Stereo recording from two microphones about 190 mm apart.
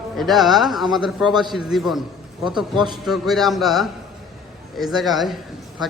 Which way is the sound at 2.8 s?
25° right (ahead or behind).